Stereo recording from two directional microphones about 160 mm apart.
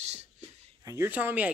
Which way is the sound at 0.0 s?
40° right (ahead or behind).